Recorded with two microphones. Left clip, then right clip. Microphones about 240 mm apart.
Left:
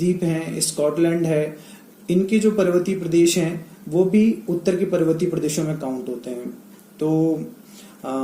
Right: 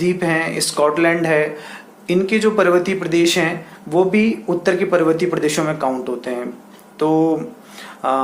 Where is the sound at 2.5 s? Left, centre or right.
Right.